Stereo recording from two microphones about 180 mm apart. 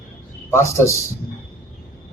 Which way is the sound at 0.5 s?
15° left (ahead or behind).